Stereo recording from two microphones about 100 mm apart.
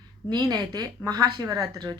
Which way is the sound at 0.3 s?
45° right (ahead or behind).